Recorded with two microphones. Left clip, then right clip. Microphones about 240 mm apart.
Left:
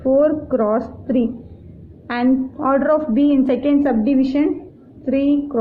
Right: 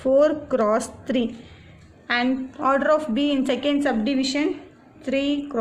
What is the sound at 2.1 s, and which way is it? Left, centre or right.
A woman's voice, right.